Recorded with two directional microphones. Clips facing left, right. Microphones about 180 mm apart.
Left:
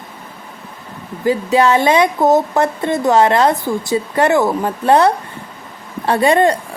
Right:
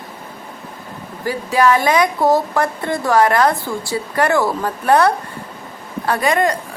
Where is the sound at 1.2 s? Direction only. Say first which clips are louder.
Left 2 dB; 25° left (ahead or behind).